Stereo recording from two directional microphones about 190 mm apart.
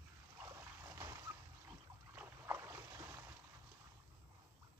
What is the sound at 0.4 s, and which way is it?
Trickle, 15° right (ahead or behind).